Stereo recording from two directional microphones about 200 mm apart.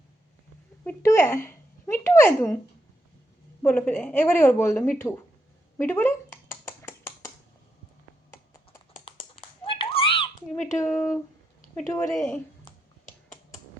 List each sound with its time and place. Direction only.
0.9 s speech: 10° left (ahead or behind)
3.6 s speech: 10° left (ahead or behind)
5.7 s a sound: 10° left (ahead or behind)
9.0 s a sound: 30° left (ahead or behind)
10.8 s speech: 10° left (ahead or behind)
12.1 s speech: 5° left (ahead or behind)